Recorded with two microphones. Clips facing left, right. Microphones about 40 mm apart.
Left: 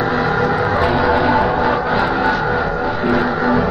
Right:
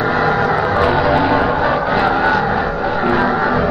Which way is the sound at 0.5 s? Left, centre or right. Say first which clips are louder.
Right 1 dB; centre.